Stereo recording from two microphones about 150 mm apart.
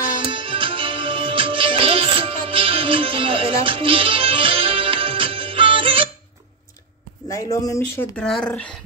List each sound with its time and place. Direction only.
0.2 s music: 35° right (ahead or behind)
7.6 s speech: 20° left (ahead or behind)
8.2 s speech: 5° left (ahead or behind)